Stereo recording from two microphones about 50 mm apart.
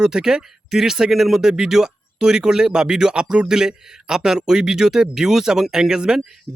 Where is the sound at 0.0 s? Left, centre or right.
Centre.